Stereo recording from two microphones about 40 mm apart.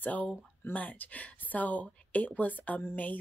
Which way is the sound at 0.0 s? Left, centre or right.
Left.